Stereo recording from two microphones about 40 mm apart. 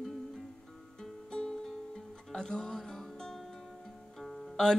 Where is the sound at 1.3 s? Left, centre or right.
Centre.